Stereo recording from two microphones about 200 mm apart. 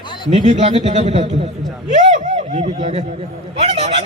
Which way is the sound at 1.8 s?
35° right (ahead or behind).